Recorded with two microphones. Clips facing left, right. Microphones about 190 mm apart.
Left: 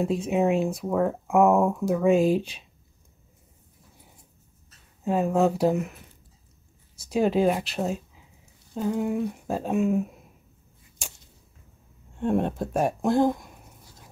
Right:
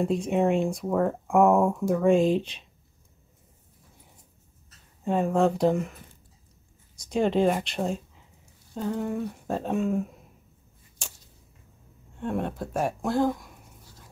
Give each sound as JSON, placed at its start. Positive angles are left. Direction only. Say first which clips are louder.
{"t": 0.0, "sound": "speech", "louder": "even", "side_deg": 5}
{"t": 5.0, "sound": "speech", "louder": "left 1 dB", "side_deg": 5}
{"t": 7.0, "sound": "speech", "louder": "left 1 dB", "side_deg": 5}
{"t": 11.0, "sound": "a sound", "louder": "left 1 dB", "side_deg": 10}
{"t": 12.2, "sound": "speech", "louder": "left 5 dB", "side_deg": 25}